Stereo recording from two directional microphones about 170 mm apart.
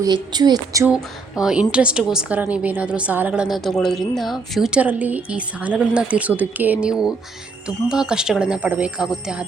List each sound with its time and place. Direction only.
0.0 s speech: 25° right (ahead or behind)
0.9 s a woman's voice: 5° right (ahead or behind)